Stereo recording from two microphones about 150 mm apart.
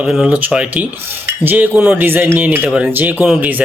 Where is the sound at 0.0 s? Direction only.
5° right (ahead or behind).